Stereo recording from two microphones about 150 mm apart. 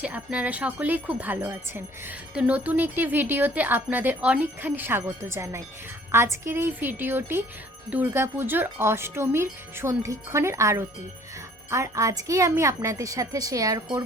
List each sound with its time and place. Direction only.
0.0 s jingle bell: 10° right (ahead or behind)
11.7 s a woman's voice: 20° right (ahead or behind)